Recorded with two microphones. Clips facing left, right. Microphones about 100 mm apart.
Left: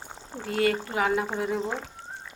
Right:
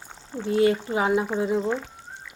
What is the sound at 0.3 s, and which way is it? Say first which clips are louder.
Speech: right 6 dB; 20° left (ahead or behind).